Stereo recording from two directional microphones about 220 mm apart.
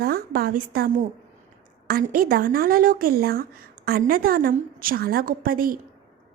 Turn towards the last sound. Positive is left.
turn(degrees=-40)  # may be behind; listen again after turning